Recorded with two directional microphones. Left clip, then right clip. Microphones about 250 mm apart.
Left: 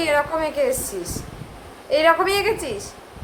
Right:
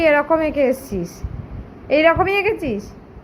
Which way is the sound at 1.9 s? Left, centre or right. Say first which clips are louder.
Right 2 dB; centre.